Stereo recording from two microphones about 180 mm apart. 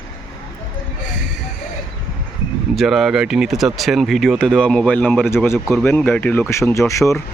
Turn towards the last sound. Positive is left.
turn(degrees=15)  # may be behind; listen again after turning